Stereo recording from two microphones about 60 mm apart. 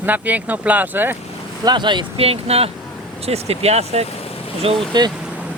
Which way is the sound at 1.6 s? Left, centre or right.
Right.